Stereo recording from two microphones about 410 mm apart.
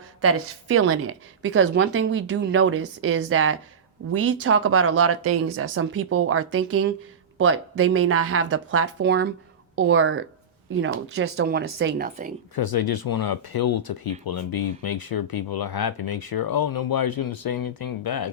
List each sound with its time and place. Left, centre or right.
0.2 s a woman's voice: right
12.5 s speech: left